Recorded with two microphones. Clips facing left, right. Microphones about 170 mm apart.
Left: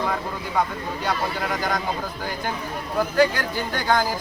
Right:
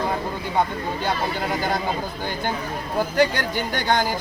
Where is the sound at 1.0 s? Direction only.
30° right (ahead or behind).